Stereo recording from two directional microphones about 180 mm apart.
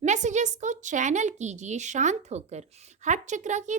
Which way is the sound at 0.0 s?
40° right (ahead or behind).